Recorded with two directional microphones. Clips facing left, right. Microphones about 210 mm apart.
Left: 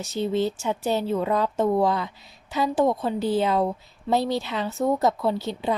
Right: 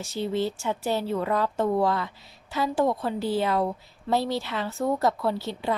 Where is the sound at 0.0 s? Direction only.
20° left (ahead or behind).